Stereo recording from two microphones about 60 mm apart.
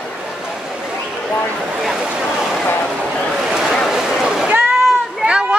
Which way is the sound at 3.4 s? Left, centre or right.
Centre.